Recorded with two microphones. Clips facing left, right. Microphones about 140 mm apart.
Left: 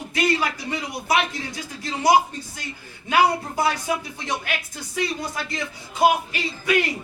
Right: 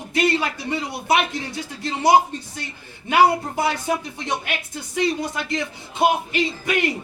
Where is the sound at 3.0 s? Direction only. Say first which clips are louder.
Right 3 dB; 25° right (ahead or behind).